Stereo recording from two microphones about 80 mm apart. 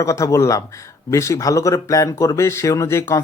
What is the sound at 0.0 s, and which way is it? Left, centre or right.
Speech, left.